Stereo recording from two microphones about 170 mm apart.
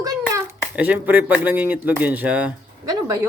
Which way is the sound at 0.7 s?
10° right (ahead or behind).